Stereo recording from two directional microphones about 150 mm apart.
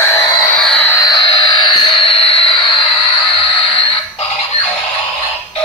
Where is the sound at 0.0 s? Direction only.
20° left (ahead or behind).